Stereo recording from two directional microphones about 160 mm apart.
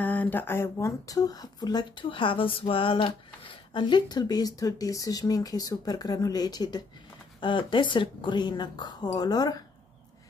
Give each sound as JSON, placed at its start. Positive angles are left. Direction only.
{"t": 0.0, "sound": "speech", "side_deg": 10}